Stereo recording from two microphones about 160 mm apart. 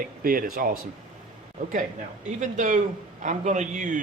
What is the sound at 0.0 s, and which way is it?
Speech, 65° right (ahead or behind).